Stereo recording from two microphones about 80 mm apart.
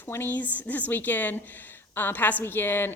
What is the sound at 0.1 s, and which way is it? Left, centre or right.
A woman's voice, left.